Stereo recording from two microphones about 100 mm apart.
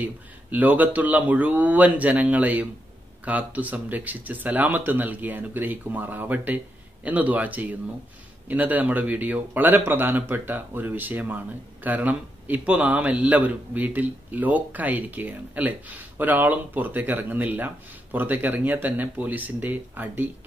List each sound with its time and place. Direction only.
0.0 s speech: 15° right (ahead or behind)